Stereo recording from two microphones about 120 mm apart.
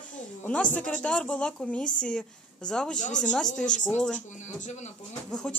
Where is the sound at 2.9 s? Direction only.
90° left.